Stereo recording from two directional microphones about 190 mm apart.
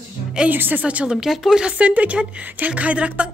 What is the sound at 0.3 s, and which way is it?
Speech, 5° right (ahead or behind).